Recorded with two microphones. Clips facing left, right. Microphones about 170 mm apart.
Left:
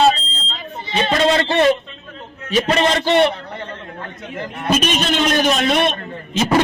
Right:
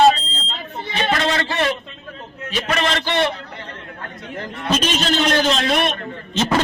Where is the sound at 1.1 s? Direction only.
25° left (ahead or behind).